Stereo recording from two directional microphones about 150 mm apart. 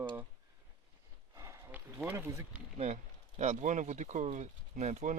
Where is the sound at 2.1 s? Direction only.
20° right (ahead or behind).